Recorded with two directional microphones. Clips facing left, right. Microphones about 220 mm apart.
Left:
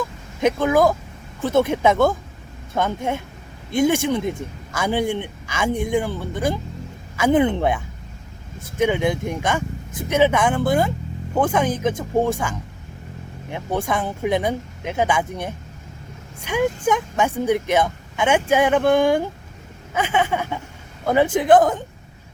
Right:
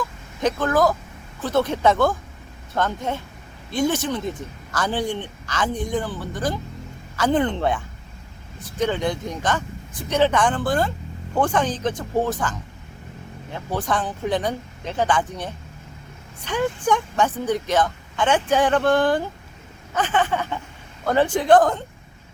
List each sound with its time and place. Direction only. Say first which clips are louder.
0.4 s speech: left 3 dB; 10° left (ahead or behind)
6.1 s speech: left 3 dB; 25° left (ahead or behind)
7.2 s speech: left 3 dB; 10° left (ahead or behind)
8.8 s speech: left 3 dB; 10° left (ahead or behind)
13.5 s speech: left 3 dB; 25° left (ahead or behind)
13.8 s speech: left 2 dB; 10° left (ahead or behind)
16.4 s speech: left 3 dB; 10° left (ahead or behind)